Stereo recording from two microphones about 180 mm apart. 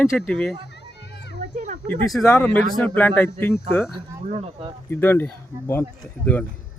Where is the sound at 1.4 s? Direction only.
40° right (ahead or behind).